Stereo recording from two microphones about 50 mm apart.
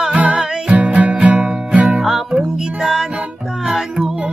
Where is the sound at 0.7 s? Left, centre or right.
Right.